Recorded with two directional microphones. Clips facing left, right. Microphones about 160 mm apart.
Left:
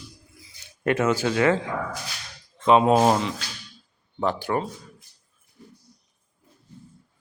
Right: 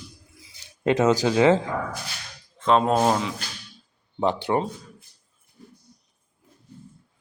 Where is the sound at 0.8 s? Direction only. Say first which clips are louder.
Right 3 dB; 20° right (ahead or behind).